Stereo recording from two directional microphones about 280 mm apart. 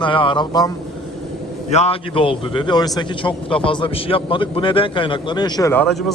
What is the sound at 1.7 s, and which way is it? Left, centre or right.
A man's voice, left.